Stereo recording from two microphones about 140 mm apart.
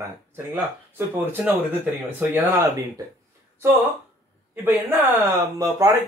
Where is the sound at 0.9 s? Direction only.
15° right (ahead or behind).